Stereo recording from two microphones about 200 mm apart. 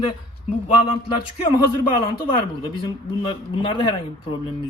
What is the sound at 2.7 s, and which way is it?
Speech, 25° left (ahead or behind).